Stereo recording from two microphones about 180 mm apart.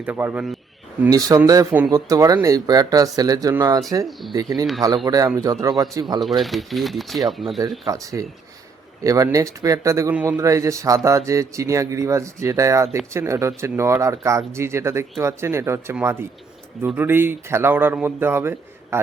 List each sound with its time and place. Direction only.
0.0 s speech: 10° right (ahead or behind)
1.1 s speech: 20° right (ahead or behind)
6.2 s speech: centre (ahead or behind)
7.6 s speech: 20° right (ahead or behind)